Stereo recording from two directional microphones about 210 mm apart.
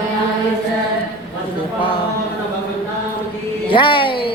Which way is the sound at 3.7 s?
25° left (ahead or behind).